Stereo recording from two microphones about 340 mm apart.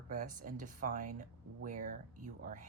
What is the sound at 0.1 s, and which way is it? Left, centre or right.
Speech, right.